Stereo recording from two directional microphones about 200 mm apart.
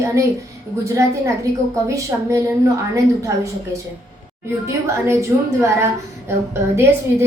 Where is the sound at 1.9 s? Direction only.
15° right (ahead or behind).